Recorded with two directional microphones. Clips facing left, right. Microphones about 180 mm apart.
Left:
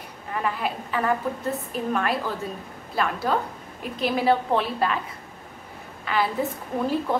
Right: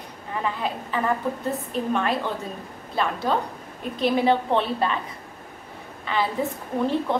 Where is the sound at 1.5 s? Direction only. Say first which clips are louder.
Right 1 dB; 5° left (ahead or behind).